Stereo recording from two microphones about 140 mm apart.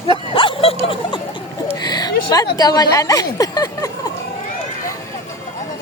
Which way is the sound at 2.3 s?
25° left (ahead or behind).